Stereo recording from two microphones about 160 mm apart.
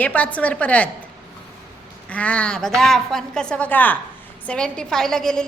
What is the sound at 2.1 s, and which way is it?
A woman's voice, 10° left (ahead or behind).